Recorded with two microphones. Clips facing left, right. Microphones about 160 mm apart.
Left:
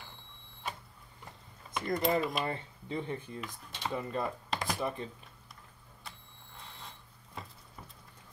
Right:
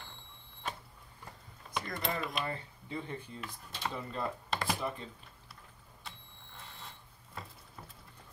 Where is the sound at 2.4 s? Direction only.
20° left (ahead or behind).